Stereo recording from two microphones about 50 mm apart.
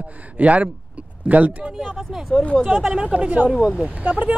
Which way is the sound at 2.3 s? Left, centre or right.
Left.